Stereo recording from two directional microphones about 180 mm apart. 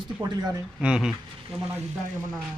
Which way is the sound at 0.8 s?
5° right (ahead or behind).